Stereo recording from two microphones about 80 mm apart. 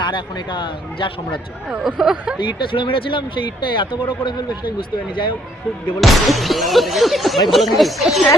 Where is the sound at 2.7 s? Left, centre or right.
Left.